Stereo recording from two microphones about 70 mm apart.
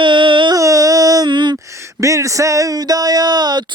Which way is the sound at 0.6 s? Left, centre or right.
Right.